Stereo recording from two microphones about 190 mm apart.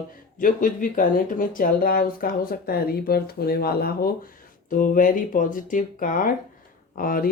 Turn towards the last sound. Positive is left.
turn(degrees=50)  # may be behind; listen again after turning